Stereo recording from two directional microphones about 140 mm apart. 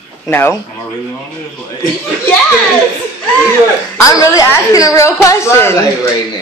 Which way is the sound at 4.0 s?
25° left (ahead or behind).